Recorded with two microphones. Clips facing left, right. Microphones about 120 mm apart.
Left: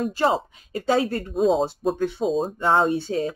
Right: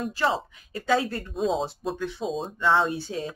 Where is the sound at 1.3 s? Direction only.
Centre (ahead or behind).